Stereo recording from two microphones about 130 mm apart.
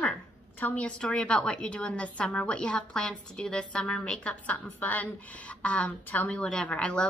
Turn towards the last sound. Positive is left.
turn(degrees=10)  # may be behind; listen again after turning